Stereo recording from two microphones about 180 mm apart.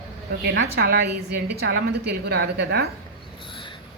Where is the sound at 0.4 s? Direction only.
65° right (ahead or behind).